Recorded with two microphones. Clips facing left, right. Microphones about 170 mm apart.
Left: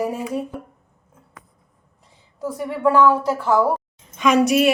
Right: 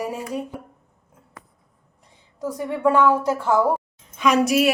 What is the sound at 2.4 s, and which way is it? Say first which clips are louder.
A woman's voice: left 1 dB; 20° right (ahead or behind).